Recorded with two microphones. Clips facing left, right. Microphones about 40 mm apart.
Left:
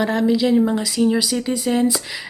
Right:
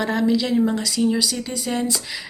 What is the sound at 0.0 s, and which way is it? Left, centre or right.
Speech, centre.